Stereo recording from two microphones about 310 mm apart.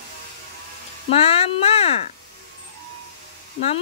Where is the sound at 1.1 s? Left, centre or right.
Centre.